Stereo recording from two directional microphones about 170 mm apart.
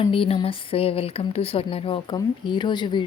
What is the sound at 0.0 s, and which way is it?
A woman's voice, 30° left (ahead or behind).